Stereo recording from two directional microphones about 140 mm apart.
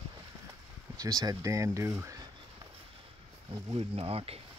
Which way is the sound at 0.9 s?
25° right (ahead or behind).